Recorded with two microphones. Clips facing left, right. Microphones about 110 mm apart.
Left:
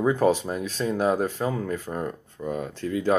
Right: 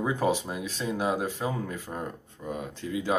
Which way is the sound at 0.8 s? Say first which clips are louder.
Left 5 dB; 10° right (ahead or behind).